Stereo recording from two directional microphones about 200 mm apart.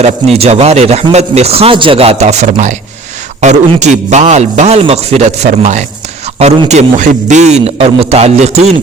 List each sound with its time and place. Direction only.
0.0 s a man's voice: 30° right (ahead or behind)